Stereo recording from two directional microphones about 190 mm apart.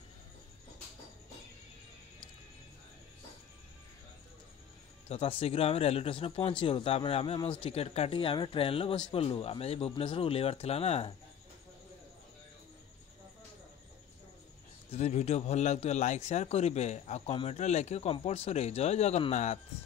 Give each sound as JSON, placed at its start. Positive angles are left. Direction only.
{"t": 5.0, "sound": "a man's voice", "side_deg": 30}
{"t": 14.9, "sound": "a man's voice", "side_deg": 35}